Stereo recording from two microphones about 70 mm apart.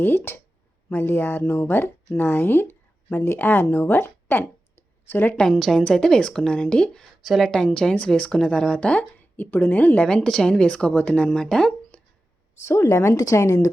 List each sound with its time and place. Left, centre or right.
0.0 s a woman's voice: left
5.4 s a woman's voice: centre
7.2 s a woman's voice: centre
7.5 s a woman's voice: centre
12.9 s a woman's voice: left